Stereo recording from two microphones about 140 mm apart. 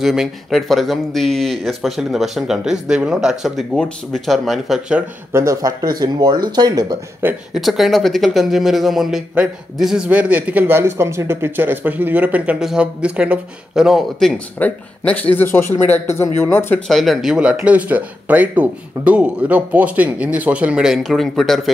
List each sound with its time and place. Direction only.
0.0 s speech: 5° right (ahead or behind)
5.3 s speech: 20° right (ahead or behind)
7.5 s speech: centre (ahead or behind)
14.6 s a man's voice: 10° left (ahead or behind)
16.8 s speech: centre (ahead or behind)